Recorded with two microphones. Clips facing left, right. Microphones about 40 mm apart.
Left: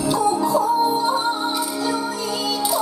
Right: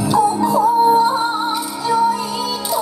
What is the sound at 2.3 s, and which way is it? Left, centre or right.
Music, centre.